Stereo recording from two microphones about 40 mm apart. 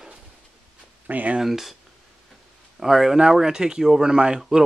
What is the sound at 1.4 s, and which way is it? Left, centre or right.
Speech, centre.